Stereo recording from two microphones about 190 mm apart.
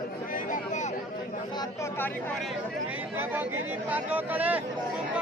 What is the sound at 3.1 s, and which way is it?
Speech, 10° right (ahead or behind).